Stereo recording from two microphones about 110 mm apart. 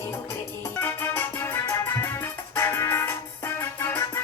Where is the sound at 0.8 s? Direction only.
20° left (ahead or behind).